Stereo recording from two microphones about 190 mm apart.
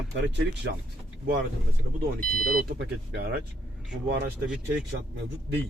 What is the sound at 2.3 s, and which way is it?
Speech, 50° right (ahead or behind).